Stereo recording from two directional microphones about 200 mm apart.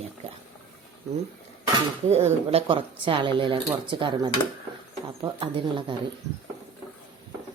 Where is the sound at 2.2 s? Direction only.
30° right (ahead or behind).